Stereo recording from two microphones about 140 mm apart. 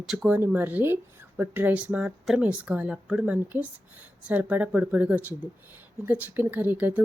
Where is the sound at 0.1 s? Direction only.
5° right (ahead or behind).